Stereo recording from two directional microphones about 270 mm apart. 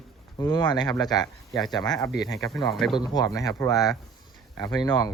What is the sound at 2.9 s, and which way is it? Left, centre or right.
Speech, centre.